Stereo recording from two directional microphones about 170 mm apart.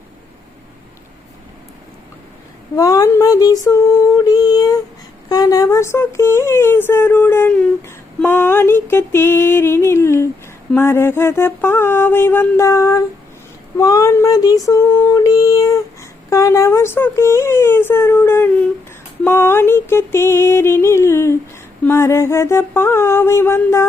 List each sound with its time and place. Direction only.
2.7 s speech: 20° left (ahead or behind)
4.2 s a sound: 20° left (ahead or behind)
5.3 s speech: 20° left (ahead or behind)